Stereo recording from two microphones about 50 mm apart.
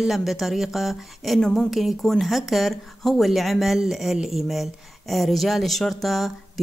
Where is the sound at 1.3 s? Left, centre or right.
Centre.